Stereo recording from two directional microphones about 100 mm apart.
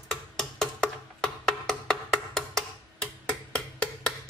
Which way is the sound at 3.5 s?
10° left (ahead or behind).